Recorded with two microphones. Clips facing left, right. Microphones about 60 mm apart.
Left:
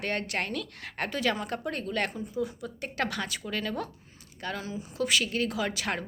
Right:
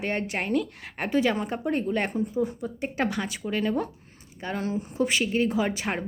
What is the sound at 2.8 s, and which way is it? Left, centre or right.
A woman's voice, centre.